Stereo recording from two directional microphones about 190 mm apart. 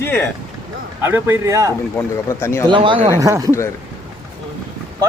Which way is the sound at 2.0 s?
15° left (ahead or behind).